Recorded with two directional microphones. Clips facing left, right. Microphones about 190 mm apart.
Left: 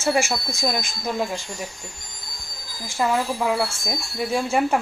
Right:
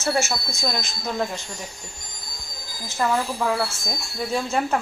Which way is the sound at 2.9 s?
10° left (ahead or behind).